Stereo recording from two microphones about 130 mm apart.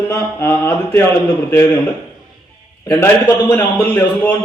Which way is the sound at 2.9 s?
20° left (ahead or behind).